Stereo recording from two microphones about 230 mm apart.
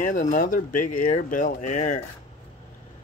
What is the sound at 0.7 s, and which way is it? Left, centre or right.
Speech, left.